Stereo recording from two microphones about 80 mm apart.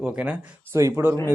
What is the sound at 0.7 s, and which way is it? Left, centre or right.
Speech, right.